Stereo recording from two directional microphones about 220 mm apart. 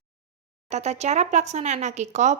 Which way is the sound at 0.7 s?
30° right (ahead or behind).